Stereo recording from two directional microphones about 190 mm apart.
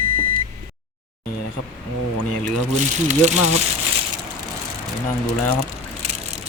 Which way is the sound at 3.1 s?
35° right (ahead or behind).